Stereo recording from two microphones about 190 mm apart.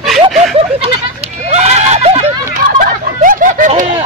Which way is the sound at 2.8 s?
45° right (ahead or behind).